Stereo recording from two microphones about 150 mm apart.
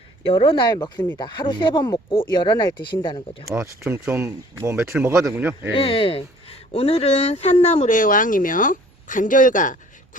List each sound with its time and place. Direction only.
0.3 s speech: 35° left (ahead or behind)
3.5 s speech: 15° right (ahead or behind)
5.7 s speech: 35° left (ahead or behind); by 9.7 s 60° left (ahead or behind)